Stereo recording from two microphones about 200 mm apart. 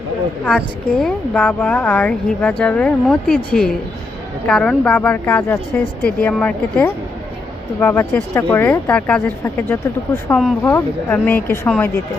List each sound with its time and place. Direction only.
0.4 s speech: 5° left (ahead or behind)